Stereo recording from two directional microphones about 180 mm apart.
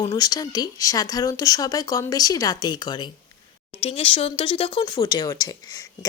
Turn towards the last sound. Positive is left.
turn(degrees=20)  # may be behind; listen again after turning